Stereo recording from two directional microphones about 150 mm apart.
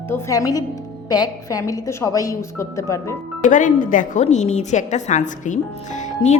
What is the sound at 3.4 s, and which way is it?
Speech, 60° left (ahead or behind).